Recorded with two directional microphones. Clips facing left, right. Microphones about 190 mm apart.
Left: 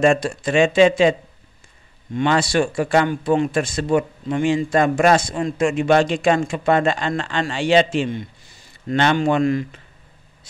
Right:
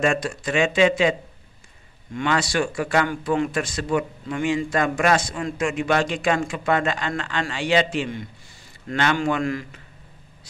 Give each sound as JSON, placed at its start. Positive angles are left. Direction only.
{"t": 0.0, "sound": "speech", "side_deg": 30}
{"t": 2.1, "sound": "speech", "side_deg": 30}